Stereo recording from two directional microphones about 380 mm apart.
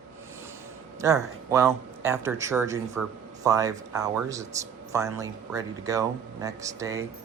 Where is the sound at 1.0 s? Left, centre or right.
Centre.